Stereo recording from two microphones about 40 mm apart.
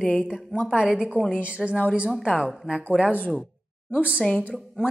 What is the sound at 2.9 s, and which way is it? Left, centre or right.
Speech, right.